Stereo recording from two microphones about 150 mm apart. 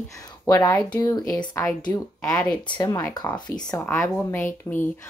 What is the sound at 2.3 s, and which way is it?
Speech, 5° left (ahead or behind).